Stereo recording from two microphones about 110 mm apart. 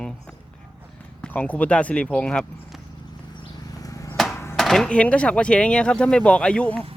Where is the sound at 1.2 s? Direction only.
10° left (ahead or behind).